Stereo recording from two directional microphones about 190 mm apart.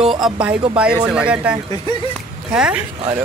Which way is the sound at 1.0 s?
5° right (ahead or behind).